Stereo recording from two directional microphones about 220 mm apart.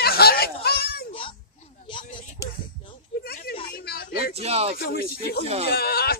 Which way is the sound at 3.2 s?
45° left (ahead or behind).